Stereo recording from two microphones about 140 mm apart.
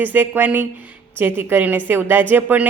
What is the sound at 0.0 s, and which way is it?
Speech, 15° right (ahead or behind).